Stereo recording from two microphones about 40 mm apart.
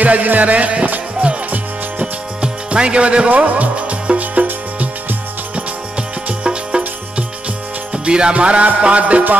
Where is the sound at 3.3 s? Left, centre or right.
Right.